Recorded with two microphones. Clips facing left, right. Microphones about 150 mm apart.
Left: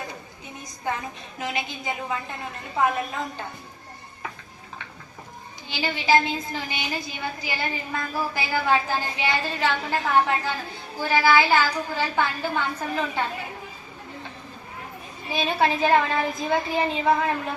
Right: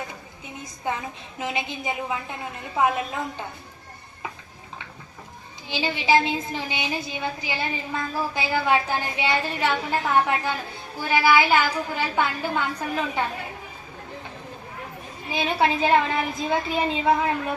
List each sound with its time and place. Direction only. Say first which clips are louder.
0.4 s a woman's voice: right 1 dB; 20° right (ahead or behind)
5.6 s a woman's voice: right 1 dB; 20° right (ahead or behind)
15.3 s a woman's voice: even; 15° right (ahead or behind)